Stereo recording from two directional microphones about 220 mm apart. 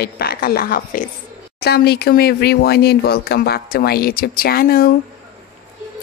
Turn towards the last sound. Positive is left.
turn(degrees=40)  # may be behind; listen again after turning